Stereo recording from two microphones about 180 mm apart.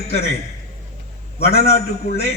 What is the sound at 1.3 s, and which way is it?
Speech, 35° left (ahead or behind).